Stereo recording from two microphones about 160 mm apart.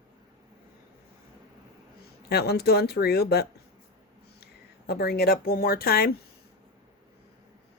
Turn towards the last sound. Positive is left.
turn(degrees=70)  # may be behind; listen again after turning